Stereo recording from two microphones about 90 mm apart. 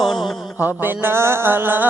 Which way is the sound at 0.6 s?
20° right (ahead or behind).